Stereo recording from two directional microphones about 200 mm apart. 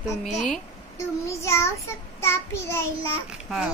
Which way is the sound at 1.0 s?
15° left (ahead or behind).